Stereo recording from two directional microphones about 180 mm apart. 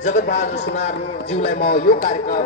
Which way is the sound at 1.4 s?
55° left (ahead or behind).